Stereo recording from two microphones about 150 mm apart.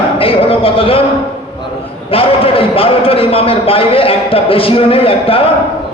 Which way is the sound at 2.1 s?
40° left (ahead or behind).